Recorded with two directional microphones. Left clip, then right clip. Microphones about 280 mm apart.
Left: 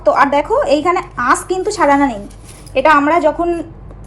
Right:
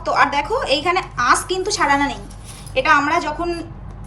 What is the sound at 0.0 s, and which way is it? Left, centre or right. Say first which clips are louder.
A woman's voice: left 5 dB; centre.